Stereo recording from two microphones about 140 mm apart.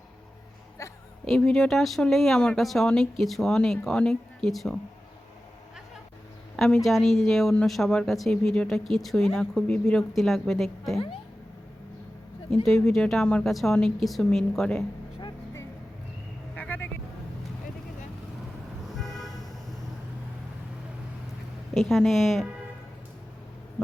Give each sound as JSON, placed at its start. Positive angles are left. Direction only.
{"t": 0.8, "sound": "a sound", "side_deg": 25}
{"t": 1.3, "sound": "speech", "side_deg": 5}
{"t": 6.8, "sound": "speech", "side_deg": 0}
{"t": 12.6, "sound": "speech", "side_deg": 5}
{"t": 16.6, "sound": "vehicle", "side_deg": 15}
{"t": 18.9, "sound": "vehicle", "side_deg": 0}
{"t": 21.8, "sound": "speech", "side_deg": 0}